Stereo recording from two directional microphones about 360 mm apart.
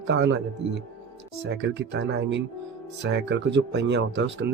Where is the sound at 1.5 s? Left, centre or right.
Right.